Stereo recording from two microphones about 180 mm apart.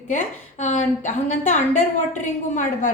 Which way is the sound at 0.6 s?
40° left (ahead or behind).